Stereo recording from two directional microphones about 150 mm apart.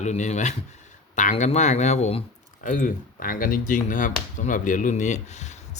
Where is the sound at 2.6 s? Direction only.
60° left (ahead or behind).